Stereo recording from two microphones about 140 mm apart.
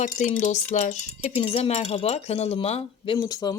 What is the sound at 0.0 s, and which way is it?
Speech, 60° left (ahead or behind).